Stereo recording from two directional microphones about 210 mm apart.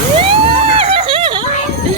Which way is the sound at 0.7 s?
25° right (ahead or behind).